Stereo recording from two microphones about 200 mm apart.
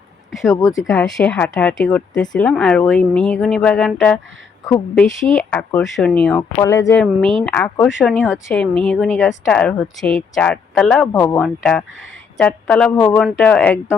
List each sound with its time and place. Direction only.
0.5 s speech: 15° left (ahead or behind)
0.9 s speech: centre (ahead or behind)
7.0 s speech: 5° left (ahead or behind)
11.3 s speech: centre (ahead or behind)